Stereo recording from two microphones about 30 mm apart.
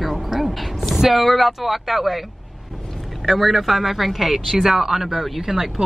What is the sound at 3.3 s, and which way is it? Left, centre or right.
Speech, centre.